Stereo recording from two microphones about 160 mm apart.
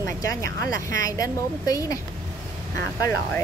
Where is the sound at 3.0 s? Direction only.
15° left (ahead or behind).